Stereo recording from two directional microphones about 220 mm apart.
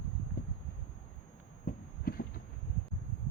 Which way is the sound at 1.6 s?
40° left (ahead or behind).